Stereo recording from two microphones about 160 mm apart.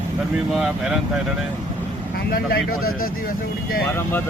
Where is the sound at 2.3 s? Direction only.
65° left (ahead or behind).